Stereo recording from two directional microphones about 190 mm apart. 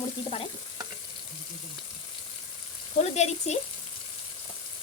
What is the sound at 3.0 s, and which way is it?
Speech, 35° left (ahead or behind).